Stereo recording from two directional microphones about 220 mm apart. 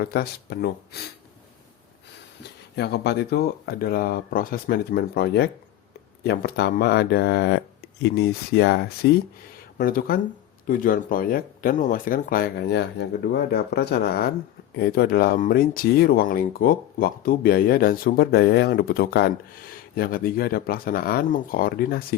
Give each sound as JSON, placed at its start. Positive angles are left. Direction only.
{"t": 0.0, "sound": "speech", "side_deg": 45}
{"t": 2.7, "sound": "speech", "side_deg": 50}